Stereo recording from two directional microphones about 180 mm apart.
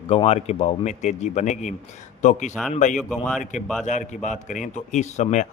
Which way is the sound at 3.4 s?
45° left (ahead or behind).